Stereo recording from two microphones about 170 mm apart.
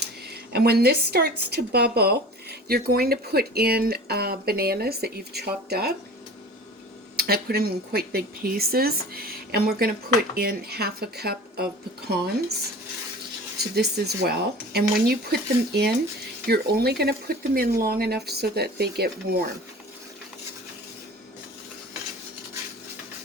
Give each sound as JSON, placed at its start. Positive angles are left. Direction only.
{"t": 0.5, "sound": "a woman's voice", "side_deg": -70}
{"t": 7.2, "sound": "a woman's voice", "side_deg": -65}
{"t": 13.7, "sound": "a woman's voice", "side_deg": -70}